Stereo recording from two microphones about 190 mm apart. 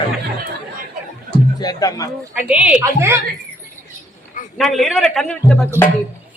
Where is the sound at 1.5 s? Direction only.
20° left (ahead or behind).